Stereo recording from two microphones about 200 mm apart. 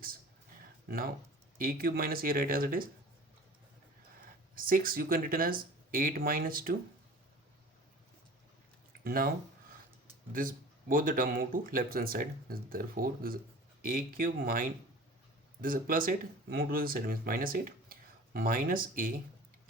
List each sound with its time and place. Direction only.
0.9 s speech: 45° right (ahead or behind)
4.2 s speech: 45° right (ahead or behind)
9.0 s speech: 45° right (ahead or behind)
10.3 s speech: 45° right (ahead or behind)